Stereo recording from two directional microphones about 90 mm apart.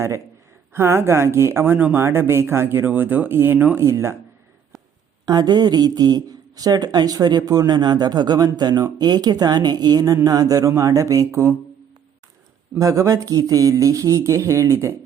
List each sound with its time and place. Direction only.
0.7 s speech: 30° right (ahead or behind)
5.2 s speech: 50° right (ahead or behind); by 11.5 s 30° right (ahead or behind)
12.8 s speech: 40° right (ahead or behind)